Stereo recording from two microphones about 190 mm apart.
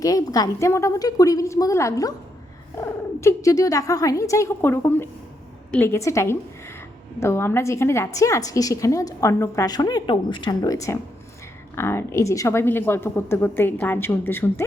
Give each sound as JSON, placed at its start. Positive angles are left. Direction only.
{"t": 0.0, "sound": "a woman's voice", "side_deg": 20}
{"t": 3.2, "sound": "a woman's voice", "side_deg": 15}